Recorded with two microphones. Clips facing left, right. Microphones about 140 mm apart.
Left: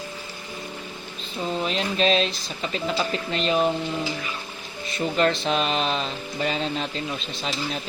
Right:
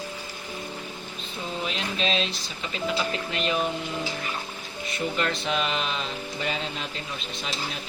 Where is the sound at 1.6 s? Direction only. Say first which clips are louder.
Left 6 dB; 40° left (ahead or behind).